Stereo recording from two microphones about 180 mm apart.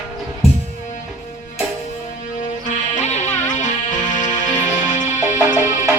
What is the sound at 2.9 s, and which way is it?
Music, 40° left (ahead or behind).